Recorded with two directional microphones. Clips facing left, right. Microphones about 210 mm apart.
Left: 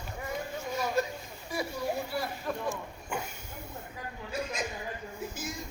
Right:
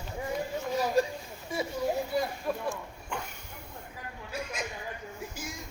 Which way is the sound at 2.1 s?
15° right (ahead or behind).